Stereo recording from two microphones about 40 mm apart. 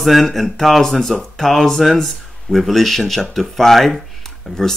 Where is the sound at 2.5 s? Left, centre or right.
Centre.